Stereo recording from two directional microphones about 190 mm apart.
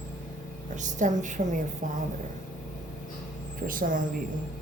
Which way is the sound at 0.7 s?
40° right (ahead or behind).